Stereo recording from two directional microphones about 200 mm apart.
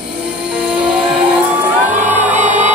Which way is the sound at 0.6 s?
5° right (ahead or behind).